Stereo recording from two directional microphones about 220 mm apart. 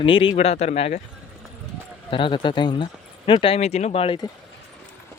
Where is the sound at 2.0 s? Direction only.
25° left (ahead or behind).